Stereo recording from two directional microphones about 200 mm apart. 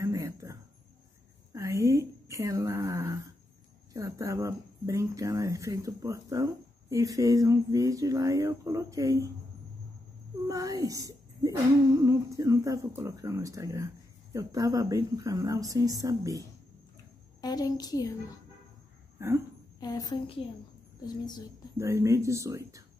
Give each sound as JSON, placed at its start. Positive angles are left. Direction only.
{"t": 0.0, "sound": "a sound", "side_deg": -15}
{"t": 3.9, "sound": "speech", "side_deg": -15}
{"t": 10.4, "sound": "speech", "side_deg": -15}
{"t": 17.4, "sound": "a child's voice", "side_deg": 20}
{"t": 19.1, "sound": "speech", "side_deg": -15}
{"t": 19.8, "sound": "a child's voice", "side_deg": 20}
{"t": 21.7, "sound": "speech", "side_deg": -15}